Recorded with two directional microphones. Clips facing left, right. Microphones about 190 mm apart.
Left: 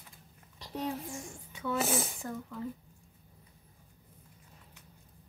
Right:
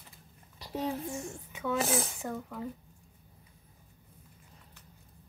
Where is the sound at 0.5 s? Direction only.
5° right (ahead or behind).